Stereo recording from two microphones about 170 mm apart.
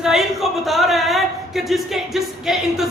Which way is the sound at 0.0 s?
Centre (ahead or behind).